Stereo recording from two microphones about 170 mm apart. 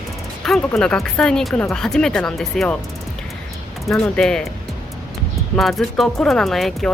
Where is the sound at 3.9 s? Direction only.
5° left (ahead or behind).